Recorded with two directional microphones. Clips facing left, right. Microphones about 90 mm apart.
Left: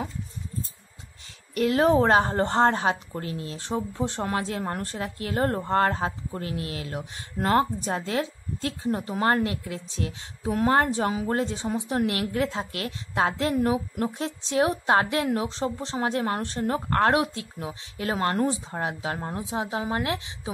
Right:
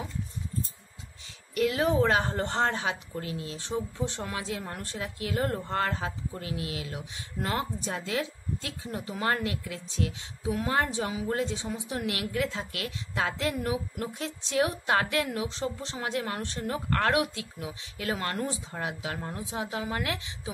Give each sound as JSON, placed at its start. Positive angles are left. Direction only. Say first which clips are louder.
{"t": 1.5, "sound": "a woman's voice", "louder": "left 5 dB", "side_deg": 40}
{"t": 10.4, "sound": "a woman's voice", "louder": "left 6 dB", "side_deg": 50}